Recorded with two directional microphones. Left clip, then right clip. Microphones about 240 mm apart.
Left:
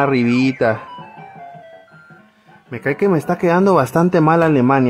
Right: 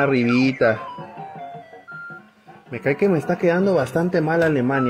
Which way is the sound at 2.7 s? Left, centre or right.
Left.